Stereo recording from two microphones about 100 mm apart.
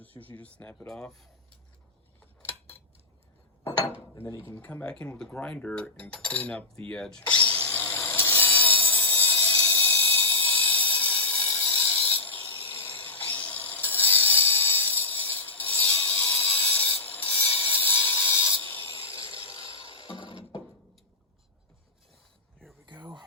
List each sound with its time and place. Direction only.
0.2 s cutlery: 15° left (ahead or behind)
2.4 s scissors: 20° left (ahead or behind)
4.4 s cutlery: 20° left (ahead or behind)
7.5 s a sound: 20° left (ahead or behind)
19.5 s music: 35° left (ahead or behind)
19.7 s music: 60° left (ahead or behind)
22.9 s a sound: 50° right (ahead or behind)